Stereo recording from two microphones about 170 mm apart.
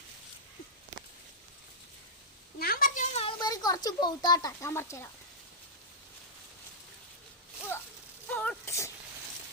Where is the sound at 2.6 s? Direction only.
55° left (ahead or behind).